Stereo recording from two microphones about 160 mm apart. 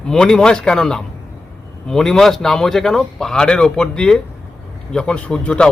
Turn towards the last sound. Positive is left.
turn(degrees=5)  # may be behind; listen again after turning